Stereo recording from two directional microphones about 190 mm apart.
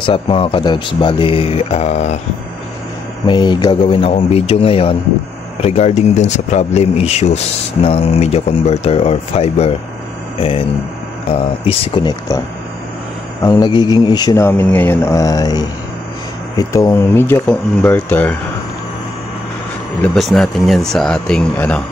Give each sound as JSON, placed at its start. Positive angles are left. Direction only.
{"t": 0.0, "sound": "speech", "side_deg": 30}
{"t": 3.3, "sound": "speech", "side_deg": 25}
{"t": 11.2, "sound": "speech", "side_deg": 30}
{"t": 13.4, "sound": "a man's voice", "side_deg": 20}
{"t": 20.0, "sound": "speech", "side_deg": 0}